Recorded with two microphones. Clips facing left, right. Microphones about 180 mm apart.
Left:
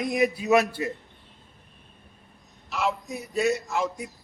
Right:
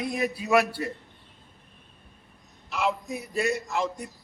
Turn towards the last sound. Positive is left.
turn(degrees=0)  # may be behind; listen again after turning